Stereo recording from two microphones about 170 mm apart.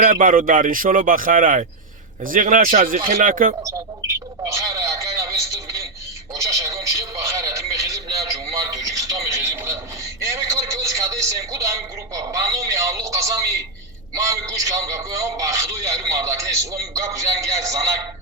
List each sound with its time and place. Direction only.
0.0 s speech: 55° right (ahead or behind)
4.4 s a man's voice: 20° right (ahead or behind)